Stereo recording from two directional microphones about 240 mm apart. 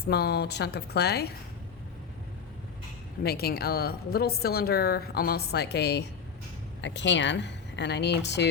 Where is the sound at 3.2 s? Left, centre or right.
Left.